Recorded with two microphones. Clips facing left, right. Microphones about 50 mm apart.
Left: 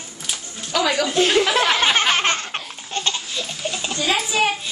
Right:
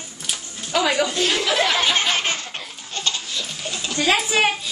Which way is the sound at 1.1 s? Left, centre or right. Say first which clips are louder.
Left 4 dB; left.